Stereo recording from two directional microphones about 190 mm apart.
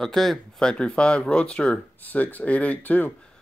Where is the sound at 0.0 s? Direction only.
Centre (ahead or behind).